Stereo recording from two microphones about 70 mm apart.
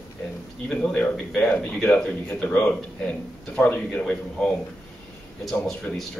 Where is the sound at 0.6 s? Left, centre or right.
Centre.